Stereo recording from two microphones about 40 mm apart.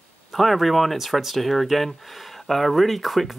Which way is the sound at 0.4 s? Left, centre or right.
Centre.